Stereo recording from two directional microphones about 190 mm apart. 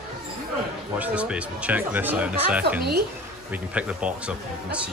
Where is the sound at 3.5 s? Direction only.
5° right (ahead or behind).